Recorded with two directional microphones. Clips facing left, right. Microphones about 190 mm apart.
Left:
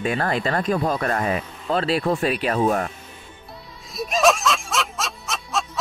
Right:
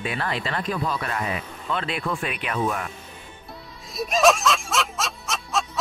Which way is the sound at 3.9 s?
Centre (ahead or behind).